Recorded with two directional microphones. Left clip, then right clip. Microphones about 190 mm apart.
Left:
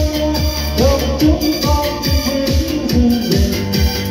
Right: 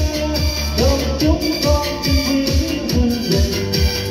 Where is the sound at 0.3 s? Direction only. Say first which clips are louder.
Left 2 dB; 30° left (ahead or behind).